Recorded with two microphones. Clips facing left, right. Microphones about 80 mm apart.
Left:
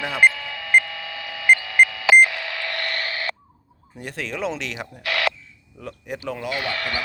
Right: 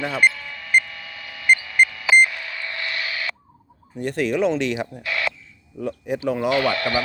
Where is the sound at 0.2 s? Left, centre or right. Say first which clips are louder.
Left 3 dB; left.